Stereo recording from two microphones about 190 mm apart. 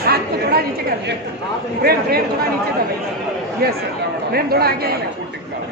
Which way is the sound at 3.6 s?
55° right (ahead or behind).